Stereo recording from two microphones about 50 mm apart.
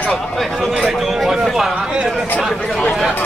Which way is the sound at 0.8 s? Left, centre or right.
Centre.